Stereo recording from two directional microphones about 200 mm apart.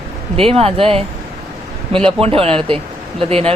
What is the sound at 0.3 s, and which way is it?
A man's voice, 30° right (ahead or behind).